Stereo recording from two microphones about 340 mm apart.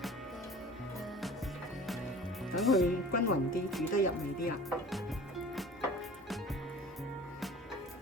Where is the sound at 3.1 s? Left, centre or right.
Left.